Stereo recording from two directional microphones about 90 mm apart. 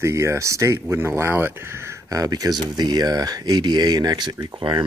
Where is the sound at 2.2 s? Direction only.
45° right (ahead or behind).